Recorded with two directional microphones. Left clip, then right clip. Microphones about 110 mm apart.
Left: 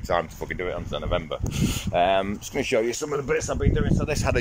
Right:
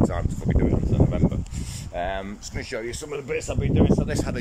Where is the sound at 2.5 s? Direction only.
20° left (ahead or behind).